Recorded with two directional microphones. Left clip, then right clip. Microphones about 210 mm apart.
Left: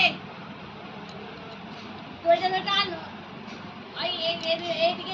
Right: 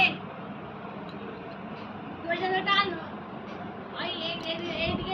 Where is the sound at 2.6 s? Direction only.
40° left (ahead or behind).